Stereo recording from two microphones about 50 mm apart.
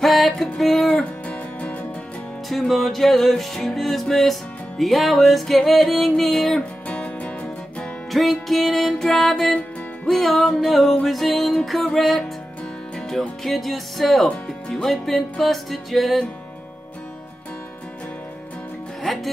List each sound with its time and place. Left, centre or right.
0.0 s music: centre
2.7 s music: centre
6.9 s music: left
8.1 s music: centre
13.4 s music: centre
14.2 s music: centre